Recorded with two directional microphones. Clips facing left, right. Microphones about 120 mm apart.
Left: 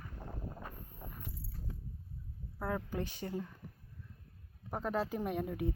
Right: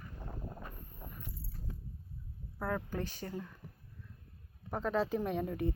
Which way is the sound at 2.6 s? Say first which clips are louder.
Right 1 dB; 20° left (ahead or behind).